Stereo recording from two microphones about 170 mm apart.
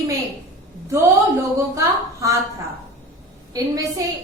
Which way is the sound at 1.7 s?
20° right (ahead or behind).